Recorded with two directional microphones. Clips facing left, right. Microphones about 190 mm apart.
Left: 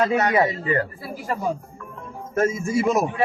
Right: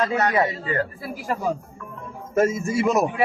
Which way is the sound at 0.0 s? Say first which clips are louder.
Left 2 dB; 25° left (ahead or behind).